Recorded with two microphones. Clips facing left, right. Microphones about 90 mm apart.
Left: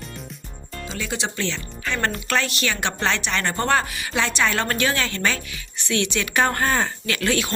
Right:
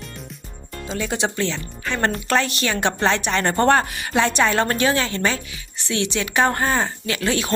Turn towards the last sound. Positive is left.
turn(degrees=-25)  # may be behind; listen again after turning